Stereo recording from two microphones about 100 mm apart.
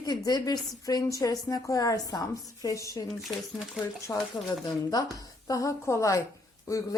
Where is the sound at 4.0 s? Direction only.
30° left (ahead or behind).